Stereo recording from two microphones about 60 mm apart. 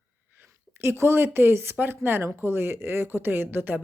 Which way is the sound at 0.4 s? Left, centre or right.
Right.